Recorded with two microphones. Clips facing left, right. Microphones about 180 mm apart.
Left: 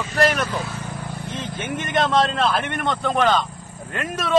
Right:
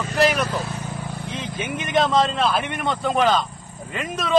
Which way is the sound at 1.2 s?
5° right (ahead or behind).